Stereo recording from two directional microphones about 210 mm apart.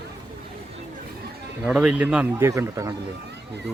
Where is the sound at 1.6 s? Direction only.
5° right (ahead or behind).